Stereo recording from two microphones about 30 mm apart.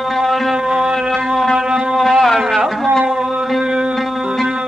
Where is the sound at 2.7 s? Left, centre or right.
Centre.